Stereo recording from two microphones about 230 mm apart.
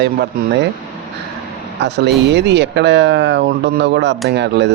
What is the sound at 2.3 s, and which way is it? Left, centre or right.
Speech, right.